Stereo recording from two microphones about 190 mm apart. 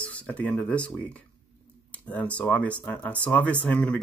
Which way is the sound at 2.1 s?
5° left (ahead or behind).